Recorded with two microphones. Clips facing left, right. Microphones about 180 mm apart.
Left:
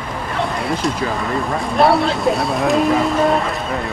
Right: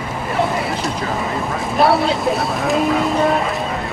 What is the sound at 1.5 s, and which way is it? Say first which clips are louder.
Speech: left 1 dB; centre (ahead or behind).